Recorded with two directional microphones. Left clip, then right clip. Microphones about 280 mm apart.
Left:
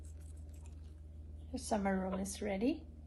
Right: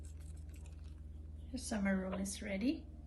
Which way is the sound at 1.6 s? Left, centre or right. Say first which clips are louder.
Left 3 dB; centre.